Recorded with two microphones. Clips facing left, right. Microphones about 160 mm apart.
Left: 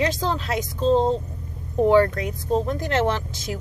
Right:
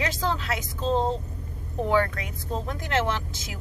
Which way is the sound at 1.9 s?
35° left (ahead or behind).